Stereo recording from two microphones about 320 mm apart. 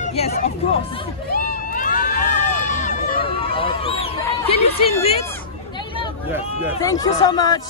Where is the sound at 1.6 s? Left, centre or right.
Left.